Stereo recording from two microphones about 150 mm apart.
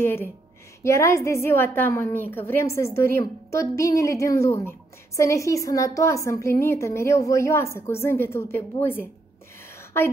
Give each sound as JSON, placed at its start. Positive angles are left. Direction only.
{"t": 0.0, "sound": "a woman's voice", "side_deg": 15}